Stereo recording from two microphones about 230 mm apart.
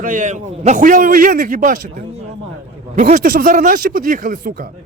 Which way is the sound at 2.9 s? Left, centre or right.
Right.